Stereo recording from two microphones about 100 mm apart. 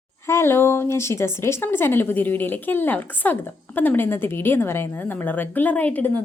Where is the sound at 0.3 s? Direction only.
25° left (ahead or behind).